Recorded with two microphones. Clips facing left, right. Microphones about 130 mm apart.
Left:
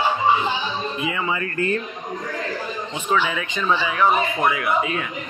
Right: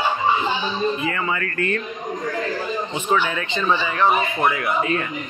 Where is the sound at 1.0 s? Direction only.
10° left (ahead or behind).